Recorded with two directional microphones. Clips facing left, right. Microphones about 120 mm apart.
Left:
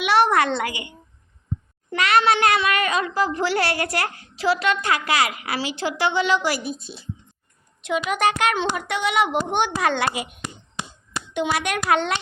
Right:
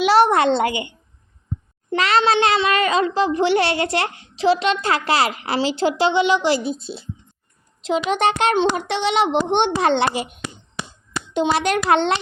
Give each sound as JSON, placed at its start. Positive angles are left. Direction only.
{"t": 0.0, "sound": "a child's voice", "side_deg": -30}
{"t": 11.3, "sound": "a child's voice", "side_deg": -30}